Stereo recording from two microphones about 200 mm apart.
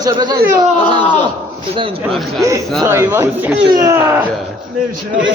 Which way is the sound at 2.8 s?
10° right (ahead or behind).